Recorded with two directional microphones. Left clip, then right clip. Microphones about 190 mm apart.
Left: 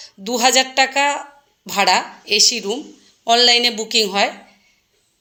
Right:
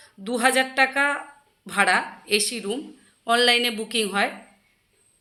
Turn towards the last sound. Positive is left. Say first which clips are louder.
# left 7 dB
turn(degrees=15)  # may be behind; listen again after turning